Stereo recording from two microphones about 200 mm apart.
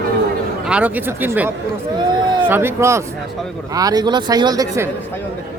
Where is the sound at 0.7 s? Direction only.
5° right (ahead or behind).